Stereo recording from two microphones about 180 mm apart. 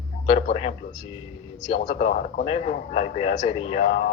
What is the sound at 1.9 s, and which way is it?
Speech, 40° left (ahead or behind).